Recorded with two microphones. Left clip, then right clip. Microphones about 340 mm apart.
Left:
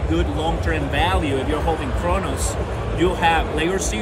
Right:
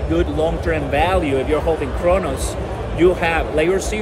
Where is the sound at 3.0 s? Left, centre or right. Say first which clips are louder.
Right 2 dB; right.